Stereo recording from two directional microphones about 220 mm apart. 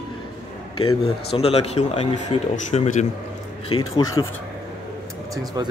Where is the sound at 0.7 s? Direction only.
25° left (ahead or behind).